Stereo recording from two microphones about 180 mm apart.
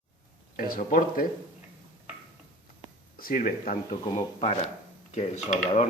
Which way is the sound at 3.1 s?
50° left (ahead or behind).